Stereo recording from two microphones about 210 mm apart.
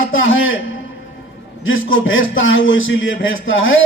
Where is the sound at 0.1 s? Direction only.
65° left (ahead or behind).